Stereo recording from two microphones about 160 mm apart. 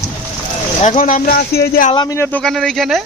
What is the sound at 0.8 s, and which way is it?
Speech, 50° left (ahead or behind).